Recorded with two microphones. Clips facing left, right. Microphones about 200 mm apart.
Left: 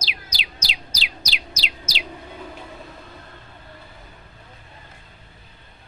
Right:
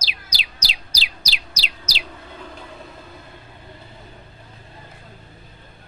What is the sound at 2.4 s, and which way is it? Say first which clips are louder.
Vehicle: left 1 dB; 5° left (ahead or behind).